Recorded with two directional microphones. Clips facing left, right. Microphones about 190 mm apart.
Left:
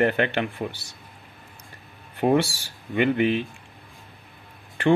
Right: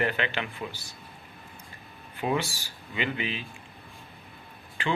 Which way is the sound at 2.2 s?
50° left (ahead or behind).